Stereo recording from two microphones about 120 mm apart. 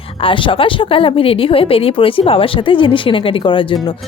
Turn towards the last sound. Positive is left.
turn(degrees=45)  # may be behind; listen again after turning